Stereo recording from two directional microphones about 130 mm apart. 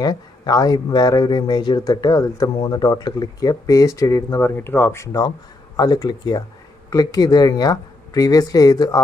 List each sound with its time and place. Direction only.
0.0 s speech: 30° left (ahead or behind)